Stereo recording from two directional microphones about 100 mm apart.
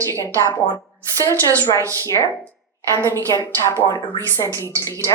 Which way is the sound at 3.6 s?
25° left (ahead or behind).